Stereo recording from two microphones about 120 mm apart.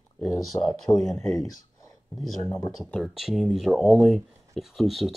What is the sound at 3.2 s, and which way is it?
Speech, centre (ahead or behind).